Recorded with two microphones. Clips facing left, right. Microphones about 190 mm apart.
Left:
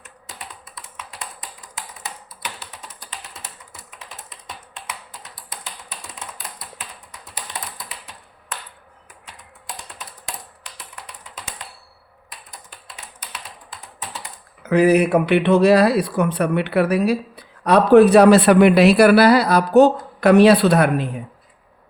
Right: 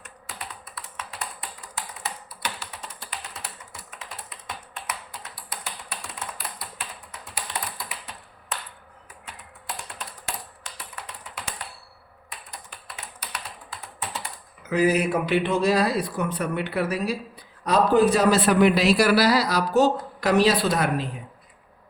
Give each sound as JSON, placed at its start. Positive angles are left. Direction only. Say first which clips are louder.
{"t": 14.6, "sound": "speech", "louder": "left 7 dB", "side_deg": 65}